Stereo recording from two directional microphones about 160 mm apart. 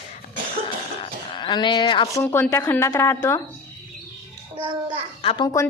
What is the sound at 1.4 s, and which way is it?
Speech, 25° left (ahead or behind).